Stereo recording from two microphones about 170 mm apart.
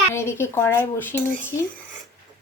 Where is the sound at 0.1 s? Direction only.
15° left (ahead or behind).